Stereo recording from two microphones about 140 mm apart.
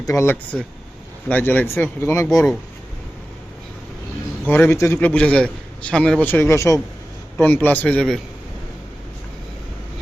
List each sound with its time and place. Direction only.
0.0 s a man's voice: 20° left (ahead or behind)
4.4 s a man's voice: 15° left (ahead or behind)